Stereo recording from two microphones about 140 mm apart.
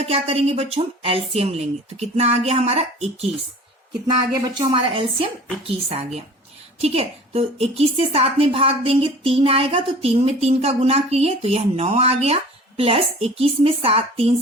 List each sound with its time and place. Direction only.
0.0 s a woman's voice: 50° right (ahead or behind)
4.0 s a woman's voice: 30° right (ahead or behind)